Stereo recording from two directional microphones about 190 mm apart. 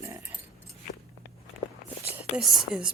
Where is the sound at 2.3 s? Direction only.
5° right (ahead or behind).